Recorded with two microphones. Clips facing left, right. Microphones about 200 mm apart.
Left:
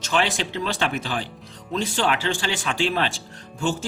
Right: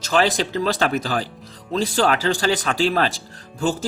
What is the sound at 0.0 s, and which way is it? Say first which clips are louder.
Speech: right 4 dB; 40° right (ahead or behind).